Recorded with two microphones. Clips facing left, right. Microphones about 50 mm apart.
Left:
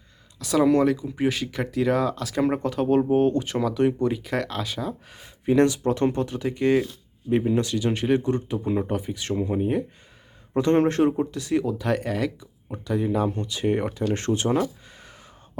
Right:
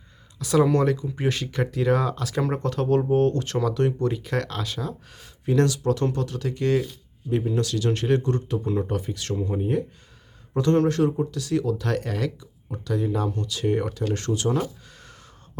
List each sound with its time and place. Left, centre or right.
0.3 s speech: centre
10.5 s speech: left
14.8 s a sound: centre